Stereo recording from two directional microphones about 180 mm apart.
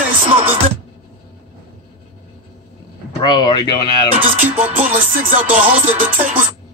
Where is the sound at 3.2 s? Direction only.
25° left (ahead or behind).